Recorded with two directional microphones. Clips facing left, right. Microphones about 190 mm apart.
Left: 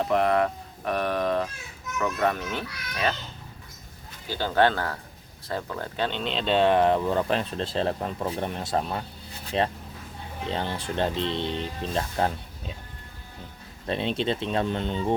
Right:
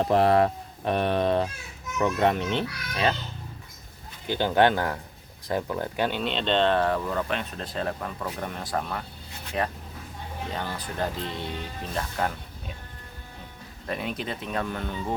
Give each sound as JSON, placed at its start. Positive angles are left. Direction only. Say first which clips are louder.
{"t": 0.0, "sound": "a child's voice", "louder": "right 2 dB", "side_deg": -30}
{"t": 4.3, "sound": "speech", "louder": "right 1 dB", "side_deg": -20}
{"t": 13.8, "sound": "speech", "louder": "left 5 dB", "side_deg": 25}